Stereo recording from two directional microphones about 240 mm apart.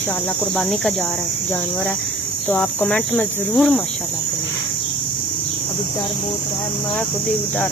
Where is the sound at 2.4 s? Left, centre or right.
Centre.